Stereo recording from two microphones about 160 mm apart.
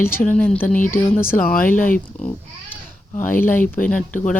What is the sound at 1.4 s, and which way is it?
Speech, 65° left (ahead or behind).